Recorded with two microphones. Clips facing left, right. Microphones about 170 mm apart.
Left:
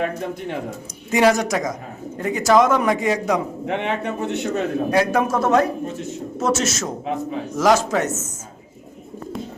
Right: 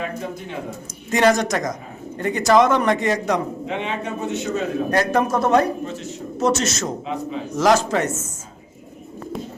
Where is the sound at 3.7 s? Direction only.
60° left (ahead or behind).